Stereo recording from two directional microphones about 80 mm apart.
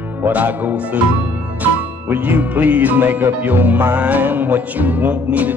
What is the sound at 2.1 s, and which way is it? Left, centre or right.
Music, right.